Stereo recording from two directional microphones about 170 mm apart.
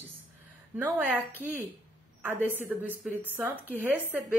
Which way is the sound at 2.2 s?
10° right (ahead or behind).